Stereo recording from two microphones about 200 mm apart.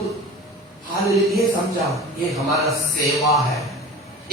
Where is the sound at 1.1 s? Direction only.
Centre (ahead or behind).